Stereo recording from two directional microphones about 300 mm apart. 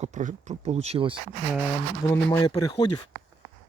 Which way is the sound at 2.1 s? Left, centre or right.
Centre.